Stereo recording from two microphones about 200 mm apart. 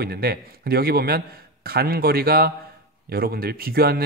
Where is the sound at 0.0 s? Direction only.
50° right (ahead or behind).